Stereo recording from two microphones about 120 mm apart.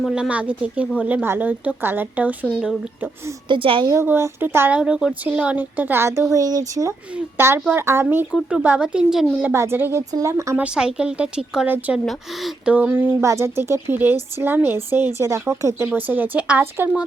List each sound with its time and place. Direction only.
0.0 s speech: 10° right (ahead or behind)
3.5 s a woman's voice: 45° right (ahead or behind)
3.8 s speech: 20° right (ahead or behind)
4.8 s speech: 5° right (ahead or behind); by 6.9 s 30° right (ahead or behind)
7.1 s speech: 20° right (ahead or behind)
9.4 s speech: 20° right (ahead or behind)
10.6 s speech: 5° right (ahead or behind)
12.7 s speech: 15° right (ahead or behind)